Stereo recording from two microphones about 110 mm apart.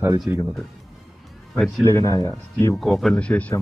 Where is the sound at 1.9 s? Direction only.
30° left (ahead or behind).